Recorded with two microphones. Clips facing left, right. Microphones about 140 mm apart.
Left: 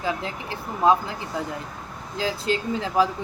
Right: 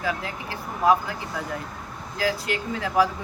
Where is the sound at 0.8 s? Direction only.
25° left (ahead or behind).